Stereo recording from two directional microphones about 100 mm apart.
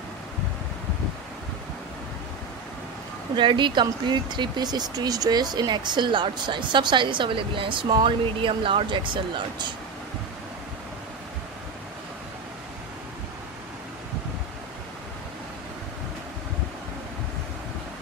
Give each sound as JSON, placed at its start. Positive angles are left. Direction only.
{"t": 3.3, "sound": "speech", "side_deg": -50}